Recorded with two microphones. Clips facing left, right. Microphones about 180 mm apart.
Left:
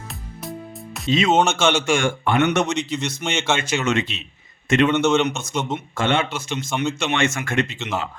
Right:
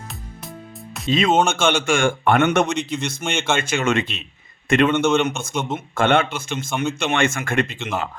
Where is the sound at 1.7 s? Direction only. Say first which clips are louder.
Right 1 dB; 55° right (ahead or behind).